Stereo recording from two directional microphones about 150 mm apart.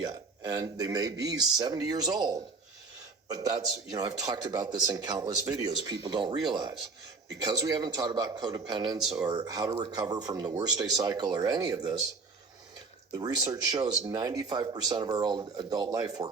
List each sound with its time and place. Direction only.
0.0 s speech: 25° right (ahead or behind)
13.1 s speech: 25° right (ahead or behind)